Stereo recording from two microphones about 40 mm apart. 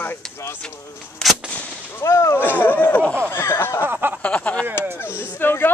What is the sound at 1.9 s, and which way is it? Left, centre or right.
Speech, left.